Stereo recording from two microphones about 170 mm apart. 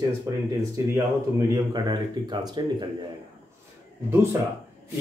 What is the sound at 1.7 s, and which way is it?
Speech, 25° right (ahead or behind).